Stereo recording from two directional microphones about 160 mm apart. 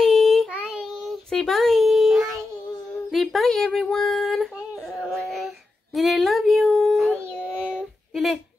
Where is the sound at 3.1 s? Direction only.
Centre (ahead or behind).